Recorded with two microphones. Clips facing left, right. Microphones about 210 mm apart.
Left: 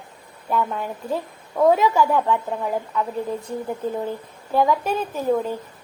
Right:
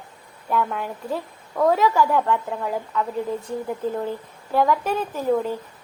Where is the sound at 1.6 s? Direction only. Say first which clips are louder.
Left 2 dB; 15° left (ahead or behind).